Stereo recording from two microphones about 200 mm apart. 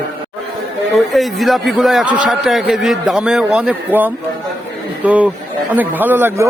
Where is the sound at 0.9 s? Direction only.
Centre (ahead or behind).